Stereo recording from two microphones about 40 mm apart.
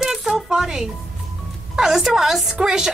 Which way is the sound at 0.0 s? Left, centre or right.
Centre.